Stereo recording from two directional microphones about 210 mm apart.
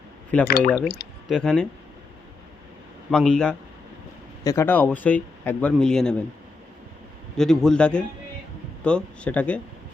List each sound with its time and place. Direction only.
0.4 s speech: 45° left (ahead or behind)
1.3 s a man's voice: 5° left (ahead or behind)
3.1 s a man's voice: 5° left (ahead or behind)
7.3 s a man's voice: 5° left (ahead or behind)